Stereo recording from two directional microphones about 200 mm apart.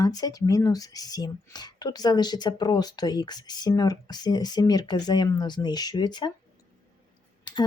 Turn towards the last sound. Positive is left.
turn(degrees=20)  # may be behind; listen again after turning